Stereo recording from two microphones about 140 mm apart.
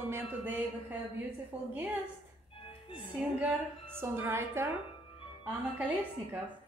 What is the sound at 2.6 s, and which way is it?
Music, 40° left (ahead or behind).